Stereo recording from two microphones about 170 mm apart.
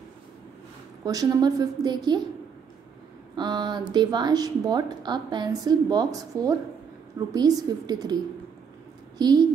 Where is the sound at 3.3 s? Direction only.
25° right (ahead or behind).